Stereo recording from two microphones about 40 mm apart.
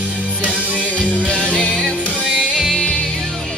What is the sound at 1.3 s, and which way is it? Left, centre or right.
Music, right.